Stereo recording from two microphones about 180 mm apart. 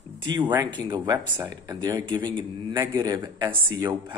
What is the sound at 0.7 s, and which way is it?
Speech, 25° right (ahead or behind).